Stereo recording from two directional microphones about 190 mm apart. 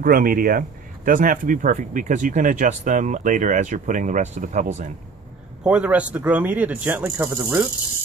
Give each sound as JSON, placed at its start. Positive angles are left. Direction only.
{"t": 0.0, "sound": "speech", "side_deg": -50}
{"t": 5.6, "sound": "speech", "side_deg": -5}